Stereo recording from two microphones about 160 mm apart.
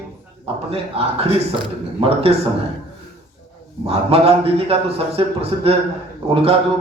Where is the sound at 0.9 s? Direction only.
40° right (ahead or behind).